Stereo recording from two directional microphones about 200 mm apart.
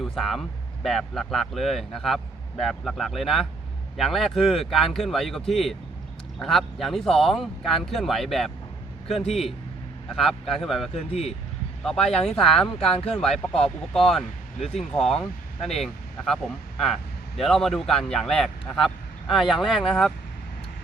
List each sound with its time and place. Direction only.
0.0 s speech: centre (ahead or behind)
10.9 s speech: 30° left (ahead or behind)
12.0 s speech: 5° left (ahead or behind)